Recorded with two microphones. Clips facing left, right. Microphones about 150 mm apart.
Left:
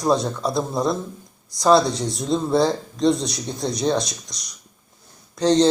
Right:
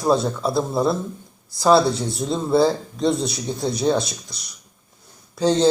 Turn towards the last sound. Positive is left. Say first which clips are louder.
# even
turn(degrees=-5)  # may be behind; listen again after turning